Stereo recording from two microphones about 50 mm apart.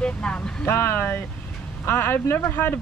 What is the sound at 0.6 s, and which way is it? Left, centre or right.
Speech, left.